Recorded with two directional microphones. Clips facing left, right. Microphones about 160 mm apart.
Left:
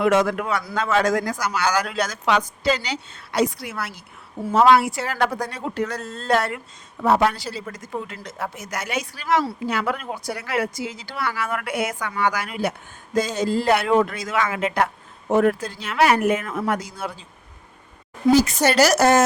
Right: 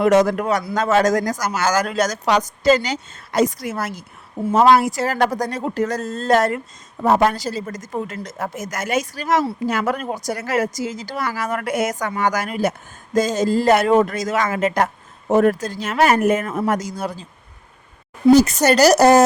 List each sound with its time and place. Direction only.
0.0 s speech: 40° right (ahead or behind)
18.3 s speech: 40° right (ahead or behind)